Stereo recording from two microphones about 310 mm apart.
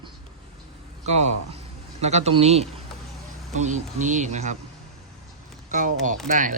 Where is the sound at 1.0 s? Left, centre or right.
Right.